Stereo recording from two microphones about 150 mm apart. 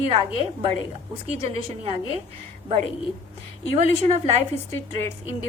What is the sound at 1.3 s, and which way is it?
Speech, 40° right (ahead or behind).